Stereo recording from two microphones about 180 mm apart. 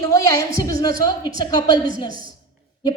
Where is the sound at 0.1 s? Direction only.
20° left (ahead or behind).